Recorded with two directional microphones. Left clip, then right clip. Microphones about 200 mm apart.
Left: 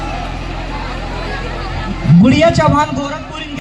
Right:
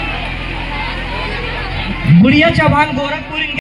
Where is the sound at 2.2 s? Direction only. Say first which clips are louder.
Even; 40° right (ahead or behind).